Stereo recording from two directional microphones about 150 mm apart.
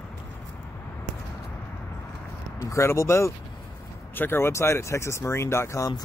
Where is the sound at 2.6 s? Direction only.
20° left (ahead or behind).